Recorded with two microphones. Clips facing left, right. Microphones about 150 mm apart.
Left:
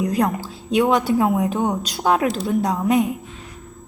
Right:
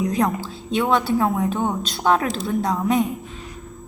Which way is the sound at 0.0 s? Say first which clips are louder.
Left 1 dB; 5° left (ahead or behind).